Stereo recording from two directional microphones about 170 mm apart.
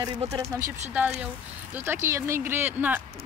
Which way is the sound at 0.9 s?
10° right (ahead or behind).